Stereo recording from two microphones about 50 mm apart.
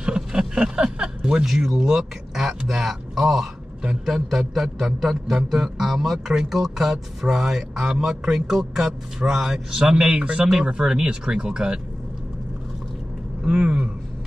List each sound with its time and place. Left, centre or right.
0.0 s speech: centre
3.8 s speech: centre
4.4 s a man's voice: centre
13.4 s a man's voice: centre